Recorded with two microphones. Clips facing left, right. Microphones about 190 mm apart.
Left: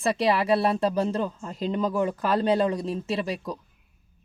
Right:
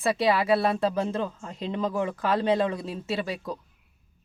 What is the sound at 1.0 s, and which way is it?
Speech, 35° left (ahead or behind).